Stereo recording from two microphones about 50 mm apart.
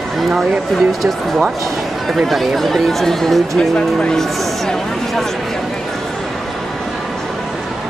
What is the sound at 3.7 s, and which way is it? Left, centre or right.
Speech, left.